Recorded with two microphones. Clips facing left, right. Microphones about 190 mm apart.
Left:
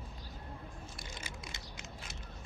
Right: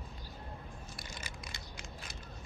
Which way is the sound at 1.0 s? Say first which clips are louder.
Left 1 dB; 25° left (ahead or behind).